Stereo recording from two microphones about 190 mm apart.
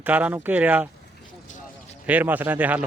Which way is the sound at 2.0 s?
10° right (ahead or behind).